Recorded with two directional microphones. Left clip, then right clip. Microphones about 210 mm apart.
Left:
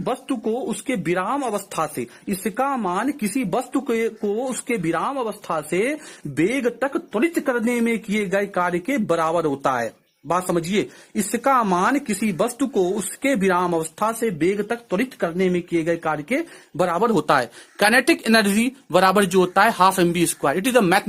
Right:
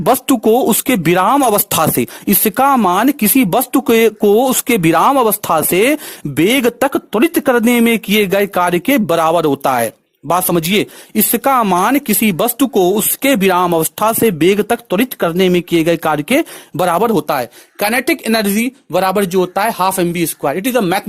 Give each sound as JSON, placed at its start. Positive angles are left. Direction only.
{"t": 0.0, "sound": "speech", "side_deg": -50}
{"t": 17.1, "sound": "speech", "side_deg": -25}